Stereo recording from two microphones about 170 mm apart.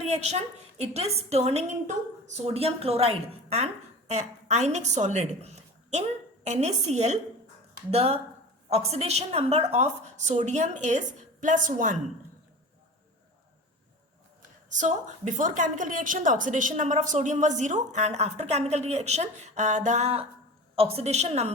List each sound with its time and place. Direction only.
0.1 s a woman's voice: 40° right (ahead or behind)
14.7 s a woman's voice: 45° right (ahead or behind)